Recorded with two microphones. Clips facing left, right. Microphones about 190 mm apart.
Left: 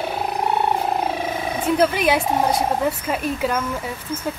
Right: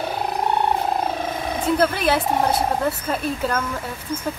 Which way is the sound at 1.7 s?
10° left (ahead or behind).